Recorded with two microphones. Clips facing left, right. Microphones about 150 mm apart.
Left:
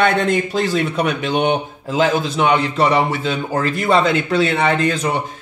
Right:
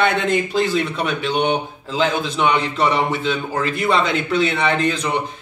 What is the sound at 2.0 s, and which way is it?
A man's voice, 40° left (ahead or behind).